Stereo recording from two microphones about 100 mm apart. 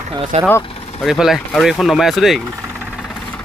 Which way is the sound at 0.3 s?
90° right.